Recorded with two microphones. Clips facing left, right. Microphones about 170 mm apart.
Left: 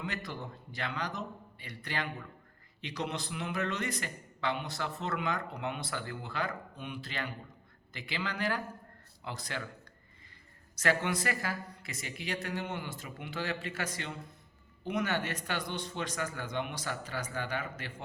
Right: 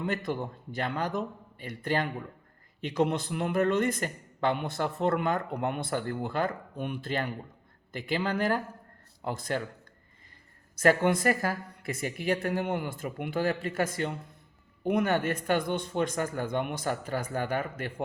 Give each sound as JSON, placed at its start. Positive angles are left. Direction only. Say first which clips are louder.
{"t": 0.0, "sound": "a man's voice", "louder": "right 8 dB", "side_deg": -50}
{"t": 10.8, "sound": "a man's voice", "louder": "right 7 dB", "side_deg": -50}